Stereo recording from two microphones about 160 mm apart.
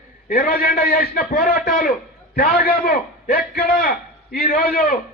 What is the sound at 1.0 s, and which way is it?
Speech, 65° left (ahead or behind).